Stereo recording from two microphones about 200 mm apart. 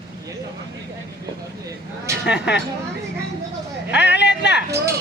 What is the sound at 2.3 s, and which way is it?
Speech, 60° left (ahead or behind).